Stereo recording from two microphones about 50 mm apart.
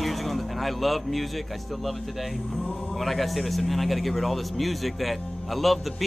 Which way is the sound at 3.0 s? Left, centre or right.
Centre.